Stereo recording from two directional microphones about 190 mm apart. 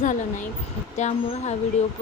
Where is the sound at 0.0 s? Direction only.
40° left (ahead or behind).